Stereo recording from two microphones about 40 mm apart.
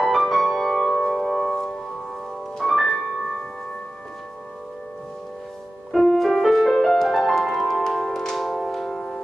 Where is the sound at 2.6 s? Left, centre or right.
Centre.